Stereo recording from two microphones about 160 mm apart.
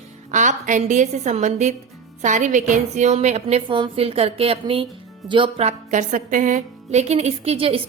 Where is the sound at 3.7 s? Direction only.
30° right (ahead or behind).